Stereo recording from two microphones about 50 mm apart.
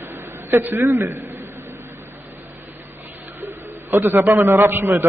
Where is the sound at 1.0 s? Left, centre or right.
Right.